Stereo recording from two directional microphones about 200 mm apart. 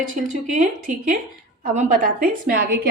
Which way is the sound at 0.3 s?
40° right (ahead or behind).